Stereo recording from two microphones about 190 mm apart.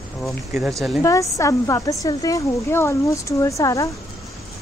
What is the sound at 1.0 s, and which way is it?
Speech, 15° left (ahead or behind).